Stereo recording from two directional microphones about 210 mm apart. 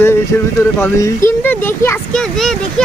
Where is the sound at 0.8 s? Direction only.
15° left (ahead or behind).